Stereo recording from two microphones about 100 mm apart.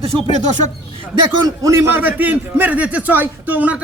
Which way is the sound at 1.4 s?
35° right (ahead or behind).